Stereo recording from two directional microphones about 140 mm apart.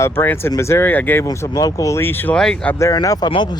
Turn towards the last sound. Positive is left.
turn(degrees=35)  # may be behind; listen again after turning